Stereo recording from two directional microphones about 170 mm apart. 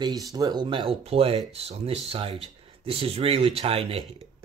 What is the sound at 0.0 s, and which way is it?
Speech, 20° right (ahead or behind).